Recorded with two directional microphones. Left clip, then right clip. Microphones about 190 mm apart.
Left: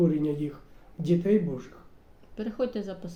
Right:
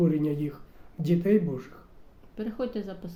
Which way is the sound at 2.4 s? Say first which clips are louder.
Left 2 dB; 10° left (ahead or behind).